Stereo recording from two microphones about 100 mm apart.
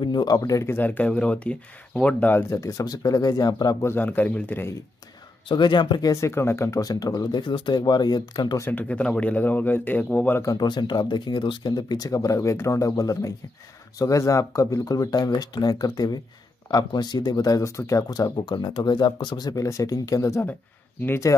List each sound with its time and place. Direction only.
0.0 s speech: 45° left (ahead or behind)
0.7 s speech: 15° left (ahead or behind)
2.5 s speech: 35° left (ahead or behind)
3.8 s speech: 20° left (ahead or behind)
5.5 s speech: 50° left (ahead or behind)
6.2 s speech: 25° left (ahead or behind); by 8.5 s 45° left (ahead or behind)
8.5 s speech: 20° left (ahead or behind)
10.4 s speech: 40° left (ahead or behind)
18.3 s speech: 45° left (ahead or behind); by 21.4 s 30° left (ahead or behind)